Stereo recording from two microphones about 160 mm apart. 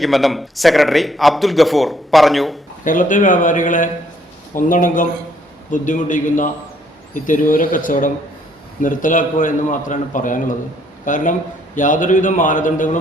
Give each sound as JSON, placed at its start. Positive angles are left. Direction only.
{"t": 0.0, "sound": "a man's voice", "side_deg": 0}
{"t": 2.8, "sound": "a man's voice", "side_deg": 55}